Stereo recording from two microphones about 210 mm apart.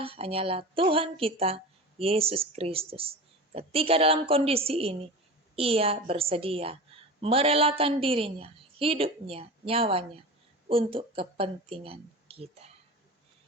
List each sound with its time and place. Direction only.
0.0 s speech: 25° right (ahead or behind)